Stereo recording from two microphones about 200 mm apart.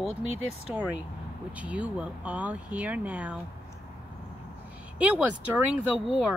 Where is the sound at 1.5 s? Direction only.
5° right (ahead or behind).